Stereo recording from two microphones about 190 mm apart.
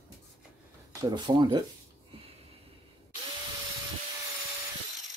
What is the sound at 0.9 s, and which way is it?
Speech, 20° right (ahead or behind).